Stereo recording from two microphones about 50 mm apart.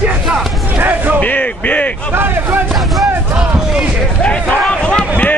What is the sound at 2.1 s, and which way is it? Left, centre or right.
Speech, right.